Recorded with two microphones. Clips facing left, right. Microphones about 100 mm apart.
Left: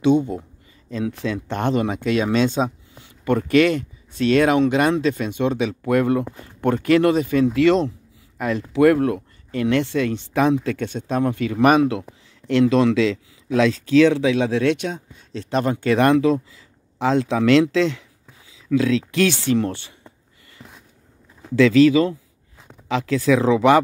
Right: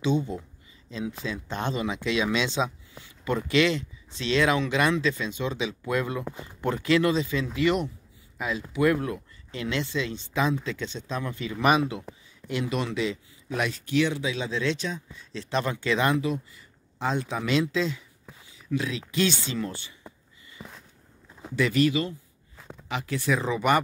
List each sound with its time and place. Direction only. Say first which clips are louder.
0.8 s speech: left 8 dB; 60° left (ahead or behind)
5.3 s speech: left 8 dB; 60° left (ahead or behind)
7.5 s speech: left 6 dB; 80° left
8.4 s speech: left 8 dB; 60° left (ahead or behind)
12.4 s speech: left 13 dB; 80° left
18.8 s speech: left 9 dB; 90° left; by 20.0 s 70° left (ahead or behind)
20.6 s a sound: right 1 dB; 10° right (ahead or behind)
21.5 s speech: left 10 dB; 90° left